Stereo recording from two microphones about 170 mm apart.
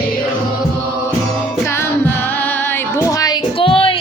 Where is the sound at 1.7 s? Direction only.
15° left (ahead or behind); by 4.0 s 30° left (ahead or behind).